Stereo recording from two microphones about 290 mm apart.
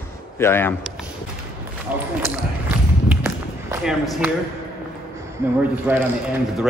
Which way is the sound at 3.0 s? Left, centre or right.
Centre.